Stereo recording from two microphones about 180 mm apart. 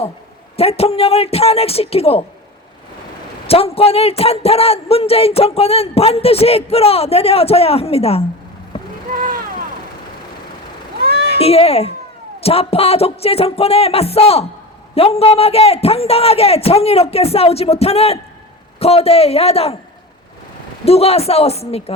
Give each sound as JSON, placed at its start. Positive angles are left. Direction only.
{"t": 0.5, "sound": "a man's voice", "side_deg": 35}
{"t": 3.4, "sound": "a man's voice", "side_deg": 35}
{"t": 11.0, "sound": "cat", "side_deg": -60}
{"t": 11.3, "sound": "a man's voice", "side_deg": 35}
{"t": 20.8, "sound": "a man's voice", "side_deg": 35}